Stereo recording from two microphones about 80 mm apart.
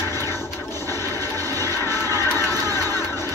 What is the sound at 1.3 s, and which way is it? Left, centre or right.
Music, left.